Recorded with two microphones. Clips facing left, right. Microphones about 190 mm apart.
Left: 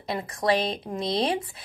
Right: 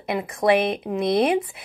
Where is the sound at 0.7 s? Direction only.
55° right (ahead or behind).